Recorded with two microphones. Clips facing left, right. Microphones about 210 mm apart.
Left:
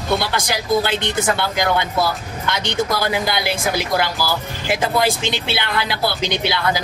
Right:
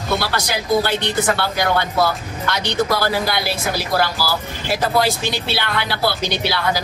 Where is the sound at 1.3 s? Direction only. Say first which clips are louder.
Even; 20° left (ahead or behind).